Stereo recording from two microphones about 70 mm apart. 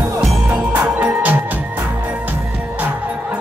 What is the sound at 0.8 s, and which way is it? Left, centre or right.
Music, right.